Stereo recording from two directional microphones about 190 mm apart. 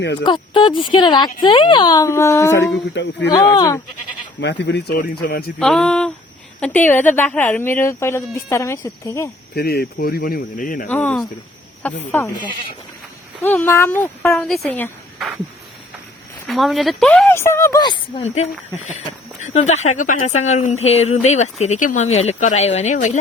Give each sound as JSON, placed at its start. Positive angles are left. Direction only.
{"t": 0.3, "sound": "speech", "side_deg": 25}
{"t": 2.9, "sound": "speech", "side_deg": 65}
{"t": 3.5, "sound": "speech", "side_deg": 20}
{"t": 4.4, "sound": "speech", "side_deg": 65}
{"t": 5.5, "sound": "a sound", "side_deg": 5}
{"t": 6.6, "sound": "speech", "side_deg": 10}
{"t": 9.6, "sound": "speech", "side_deg": 55}
{"t": 10.8, "sound": "speech", "side_deg": 10}
{"t": 13.4, "sound": "speech", "side_deg": 10}
{"t": 16.5, "sound": "speech", "side_deg": 0}